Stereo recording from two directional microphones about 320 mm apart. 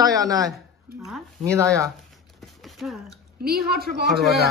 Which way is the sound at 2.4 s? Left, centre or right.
Centre.